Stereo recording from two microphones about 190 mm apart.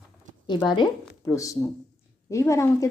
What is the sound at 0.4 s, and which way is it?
Speech, 25° left (ahead or behind).